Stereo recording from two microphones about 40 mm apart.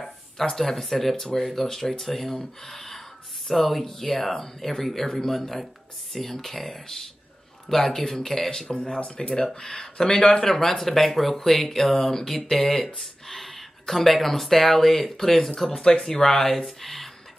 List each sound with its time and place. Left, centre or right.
0.5 s speech: centre
8.7 s speech: left
9.6 s speech: centre